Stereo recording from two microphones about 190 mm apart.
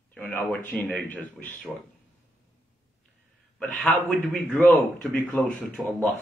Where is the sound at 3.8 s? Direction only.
Centre (ahead or behind).